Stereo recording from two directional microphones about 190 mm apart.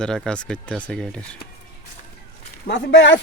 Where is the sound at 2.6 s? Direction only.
65° left (ahead or behind).